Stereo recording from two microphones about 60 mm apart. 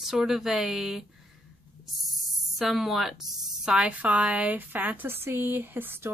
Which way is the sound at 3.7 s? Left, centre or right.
Centre.